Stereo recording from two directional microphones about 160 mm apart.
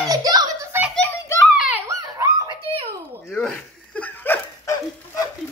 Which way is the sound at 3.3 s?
5° left (ahead or behind).